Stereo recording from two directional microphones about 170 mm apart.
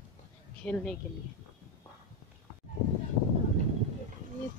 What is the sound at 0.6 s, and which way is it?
Speech, 5° left (ahead or behind).